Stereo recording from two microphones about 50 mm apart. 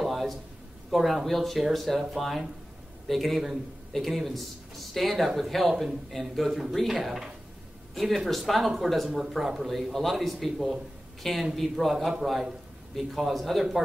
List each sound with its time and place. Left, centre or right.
0.0 s a sound: centre
0.8 s speech: centre
11.9 s a man's voice: centre